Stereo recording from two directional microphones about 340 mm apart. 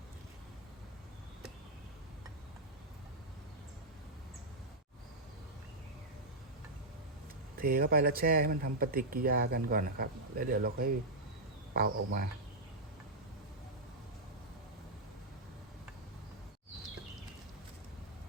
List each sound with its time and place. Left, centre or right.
7.6 s speech: right